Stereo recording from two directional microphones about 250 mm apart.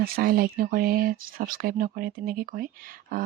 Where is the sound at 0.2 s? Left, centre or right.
Right.